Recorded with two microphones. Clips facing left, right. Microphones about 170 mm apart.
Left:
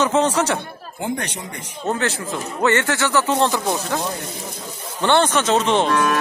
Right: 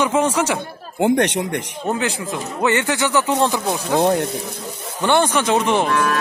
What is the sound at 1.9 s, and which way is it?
Speech, 15° right (ahead or behind).